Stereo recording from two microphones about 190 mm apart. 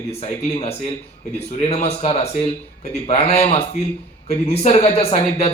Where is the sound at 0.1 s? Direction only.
30° left (ahead or behind).